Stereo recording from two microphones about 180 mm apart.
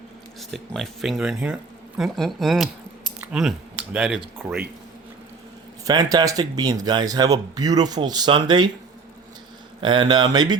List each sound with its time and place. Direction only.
0.3 s speech: centre (ahead or behind)
5.8 s speech: 20° right (ahead or behind)
9.8 s speech: 25° right (ahead or behind)